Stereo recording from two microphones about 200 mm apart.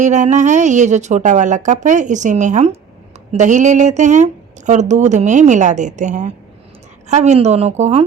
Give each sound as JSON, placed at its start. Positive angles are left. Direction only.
{"t": 0.0, "sound": "speech", "side_deg": -35}